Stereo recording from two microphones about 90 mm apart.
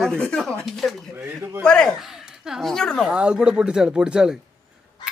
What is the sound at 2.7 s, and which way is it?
Speech, 5° left (ahead or behind).